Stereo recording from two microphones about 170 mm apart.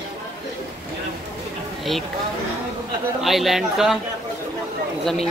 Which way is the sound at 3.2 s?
Centre (ahead or behind).